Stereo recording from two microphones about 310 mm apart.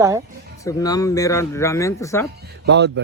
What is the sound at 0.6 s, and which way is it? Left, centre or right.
Speech, centre.